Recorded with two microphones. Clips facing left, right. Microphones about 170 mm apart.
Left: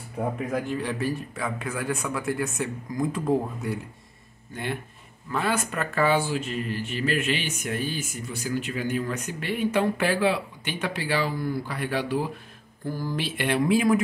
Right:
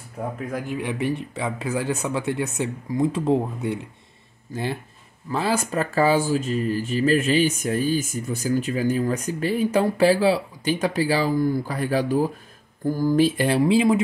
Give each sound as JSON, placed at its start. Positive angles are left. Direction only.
{"t": 0.6, "sound": "speech", "side_deg": -15}
{"t": 5.3, "sound": "speech", "side_deg": -35}